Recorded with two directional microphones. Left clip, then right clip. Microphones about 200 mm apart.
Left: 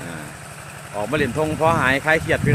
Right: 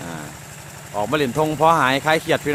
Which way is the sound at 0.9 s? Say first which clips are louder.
Right 2 dB; 15° right (ahead or behind).